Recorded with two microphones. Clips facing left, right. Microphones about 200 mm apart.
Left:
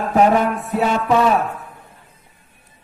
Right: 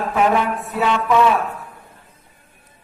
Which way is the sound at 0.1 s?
40° left (ahead or behind).